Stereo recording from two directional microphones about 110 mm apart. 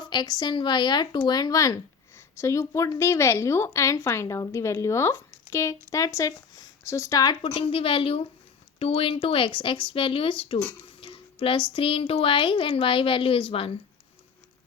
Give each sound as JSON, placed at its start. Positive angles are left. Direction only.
{"t": 0.0, "sound": "speech", "side_deg": 40}
{"t": 7.4, "sound": "speech", "side_deg": 60}
{"t": 11.0, "sound": "a sound", "side_deg": 55}
{"t": 11.7, "sound": "speech", "side_deg": 55}